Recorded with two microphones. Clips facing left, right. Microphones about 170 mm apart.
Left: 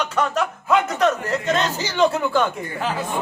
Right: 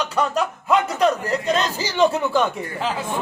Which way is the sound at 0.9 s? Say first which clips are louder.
Right 1 dB; 35° right (ahead or behind).